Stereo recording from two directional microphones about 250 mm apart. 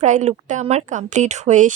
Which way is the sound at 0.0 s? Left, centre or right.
Right.